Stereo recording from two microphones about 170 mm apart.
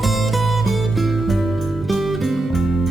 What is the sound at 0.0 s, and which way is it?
Music, centre (ahead or behind).